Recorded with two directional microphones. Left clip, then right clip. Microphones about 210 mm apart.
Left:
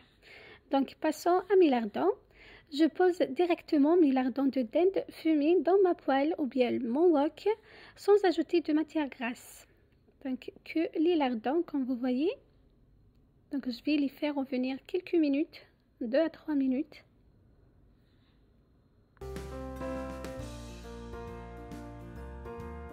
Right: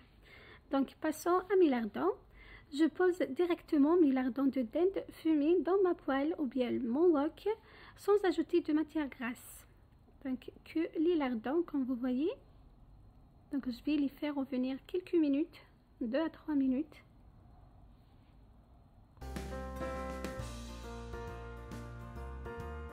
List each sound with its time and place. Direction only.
0.2 s a woman's voice: 20° left (ahead or behind)
13.5 s a woman's voice: 20° left (ahead or behind)